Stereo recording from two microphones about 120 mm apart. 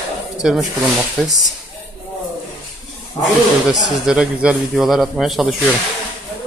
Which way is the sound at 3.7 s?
5° right (ahead or behind).